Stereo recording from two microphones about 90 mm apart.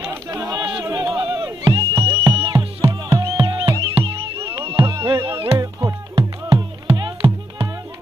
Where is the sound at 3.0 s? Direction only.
40° right (ahead or behind).